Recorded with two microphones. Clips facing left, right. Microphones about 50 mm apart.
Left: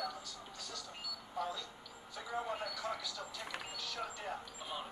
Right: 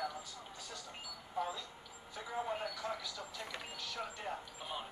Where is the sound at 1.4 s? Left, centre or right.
Centre.